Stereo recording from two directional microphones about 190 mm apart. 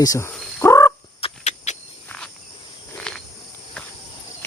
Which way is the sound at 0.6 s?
15° left (ahead or behind).